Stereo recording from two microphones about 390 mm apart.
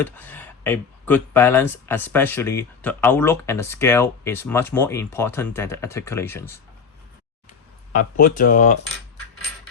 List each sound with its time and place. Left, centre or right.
0.0 s speech: centre
7.9 s speech: left